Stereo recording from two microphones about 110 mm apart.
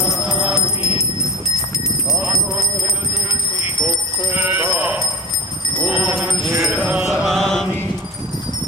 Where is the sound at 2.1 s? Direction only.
Centre (ahead or behind).